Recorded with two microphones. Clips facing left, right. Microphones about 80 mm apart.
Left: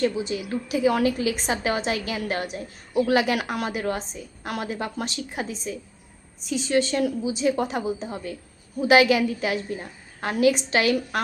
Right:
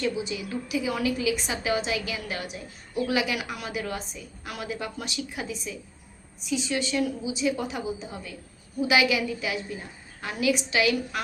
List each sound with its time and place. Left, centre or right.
0.0 s a woman's voice: left
3.7 s a woman's voice: left